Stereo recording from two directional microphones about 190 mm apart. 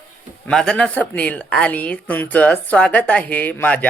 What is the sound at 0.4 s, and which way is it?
Speech, 5° left (ahead or behind).